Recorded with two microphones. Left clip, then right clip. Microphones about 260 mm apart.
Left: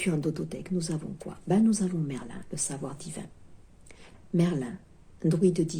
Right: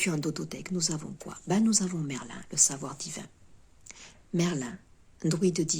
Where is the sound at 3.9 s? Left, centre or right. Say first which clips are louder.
Left 2 dB; right.